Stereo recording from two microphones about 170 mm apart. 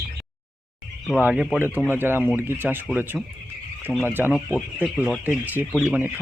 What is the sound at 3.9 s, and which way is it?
Speech, 10° right (ahead or behind).